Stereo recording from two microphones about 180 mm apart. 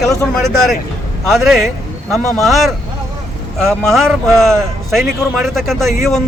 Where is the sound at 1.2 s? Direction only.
Centre (ahead or behind).